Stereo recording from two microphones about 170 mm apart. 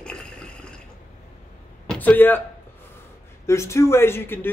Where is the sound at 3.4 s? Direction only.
15° left (ahead or behind).